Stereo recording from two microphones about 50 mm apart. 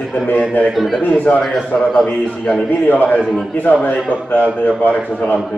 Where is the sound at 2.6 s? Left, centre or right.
Left.